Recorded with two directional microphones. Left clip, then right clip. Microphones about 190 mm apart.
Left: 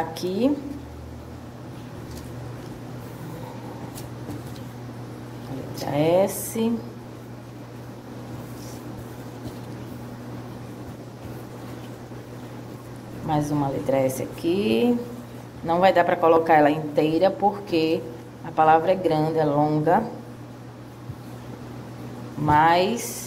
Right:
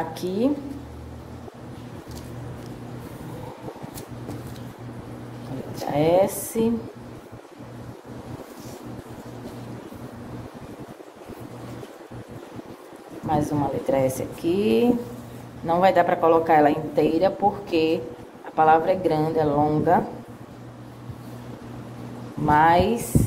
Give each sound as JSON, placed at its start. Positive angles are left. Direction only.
{"t": 0.1, "sound": "speech", "side_deg": -15}
{"t": 5.9, "sound": "speech", "side_deg": -15}
{"t": 13.3, "sound": "speech", "side_deg": -15}
{"t": 22.5, "sound": "a woman's voice", "side_deg": -20}